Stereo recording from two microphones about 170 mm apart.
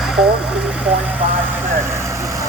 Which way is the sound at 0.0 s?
Centre (ahead or behind).